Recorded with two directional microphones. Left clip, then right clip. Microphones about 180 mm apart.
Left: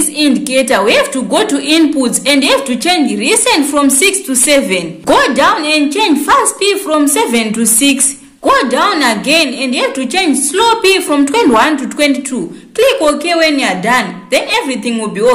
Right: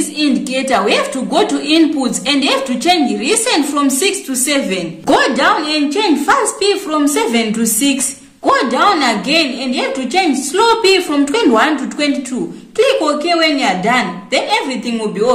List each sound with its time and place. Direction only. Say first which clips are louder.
0.2 s a woman's voice: left 5 dB; 35° left (ahead or behind)